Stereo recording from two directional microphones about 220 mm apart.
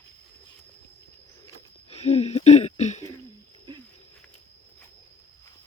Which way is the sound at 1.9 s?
30° left (ahead or behind).